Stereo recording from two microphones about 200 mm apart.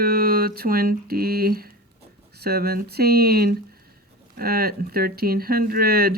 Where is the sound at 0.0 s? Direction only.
50° right (ahead or behind).